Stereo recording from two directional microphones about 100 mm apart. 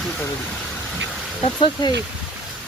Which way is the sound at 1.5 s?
50° left (ahead or behind).